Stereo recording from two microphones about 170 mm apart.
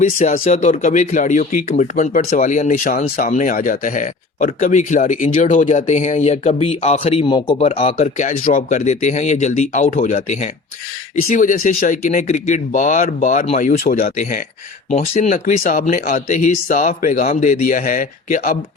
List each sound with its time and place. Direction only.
0.0 s speech: 40° left (ahead or behind)
13.6 s speech: 55° left (ahead or behind)
14.2 s speech: 50° left (ahead or behind)